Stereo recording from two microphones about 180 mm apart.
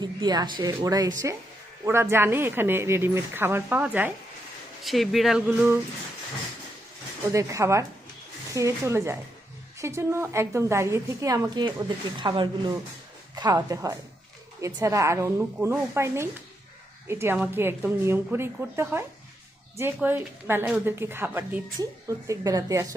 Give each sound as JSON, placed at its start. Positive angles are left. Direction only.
{"t": 0.0, "sound": "a woman's voice", "side_deg": -25}
{"t": 7.3, "sound": "a woman's voice", "side_deg": -15}